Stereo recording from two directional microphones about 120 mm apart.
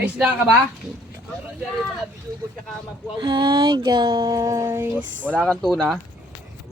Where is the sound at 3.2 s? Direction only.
40° right (ahead or behind); by 5.4 s 15° right (ahead or behind).